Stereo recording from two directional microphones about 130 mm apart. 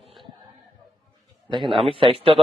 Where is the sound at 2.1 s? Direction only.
45° right (ahead or behind).